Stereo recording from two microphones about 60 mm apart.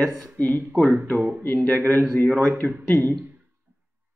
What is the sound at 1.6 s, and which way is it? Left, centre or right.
Speech, left.